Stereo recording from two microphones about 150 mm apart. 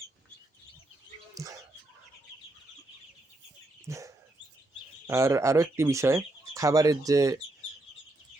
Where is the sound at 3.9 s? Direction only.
20° right (ahead or behind).